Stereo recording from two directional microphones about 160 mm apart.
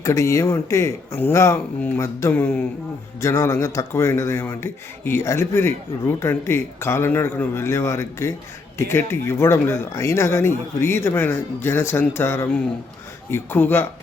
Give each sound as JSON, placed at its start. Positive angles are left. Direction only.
{"t": 0.0, "sound": "a man's voice", "side_deg": 20}